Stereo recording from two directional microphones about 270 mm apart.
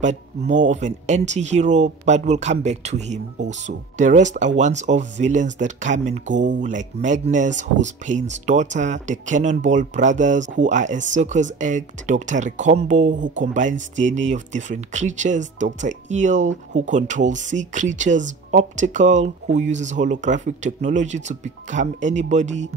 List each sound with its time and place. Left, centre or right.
0.0 s speech: right